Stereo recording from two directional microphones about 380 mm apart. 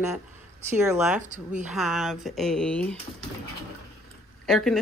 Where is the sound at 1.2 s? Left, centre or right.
Centre.